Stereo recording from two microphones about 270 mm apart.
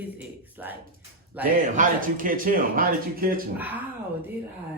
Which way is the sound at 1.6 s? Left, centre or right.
Right.